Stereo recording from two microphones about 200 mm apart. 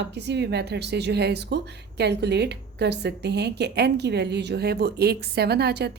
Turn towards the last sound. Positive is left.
turn(degrees=-55)  # may be behind; listen again after turning